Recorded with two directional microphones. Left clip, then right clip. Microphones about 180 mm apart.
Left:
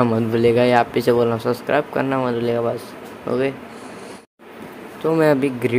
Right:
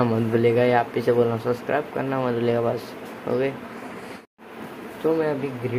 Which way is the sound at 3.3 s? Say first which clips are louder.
Left 3 dB; 10° left (ahead or behind).